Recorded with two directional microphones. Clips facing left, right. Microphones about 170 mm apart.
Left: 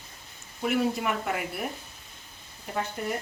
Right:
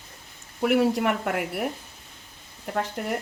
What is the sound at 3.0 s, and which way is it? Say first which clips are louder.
Speech: right 1 dB; 70° right (ahead or behind).